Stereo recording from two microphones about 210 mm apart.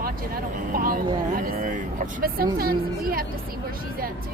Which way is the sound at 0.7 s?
45° right (ahead or behind).